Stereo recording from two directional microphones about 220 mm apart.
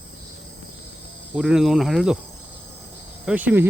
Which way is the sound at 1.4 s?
5° right (ahead or behind).